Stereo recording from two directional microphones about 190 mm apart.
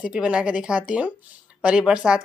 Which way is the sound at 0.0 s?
5° right (ahead or behind).